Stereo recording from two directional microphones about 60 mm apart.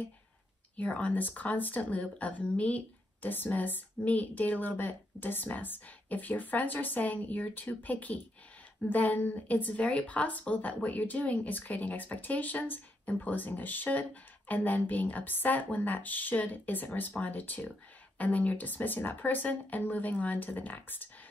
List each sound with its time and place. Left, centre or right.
0.7 s speech: left